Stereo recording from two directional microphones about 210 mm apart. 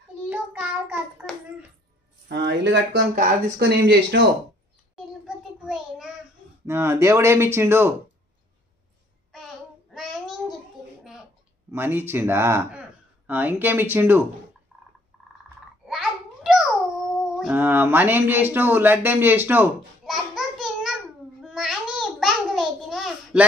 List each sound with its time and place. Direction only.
0.3 s child singing: 5° right (ahead or behind)
2.2 s speech: 55° right (ahead or behind)
4.9 s a sound: centre (ahead or behind)
6.6 s speech: 10° right (ahead or behind)
9.3 s child singing: centre (ahead or behind)
11.7 s speech: 10° right (ahead or behind)
15.9 s a sound: centre (ahead or behind)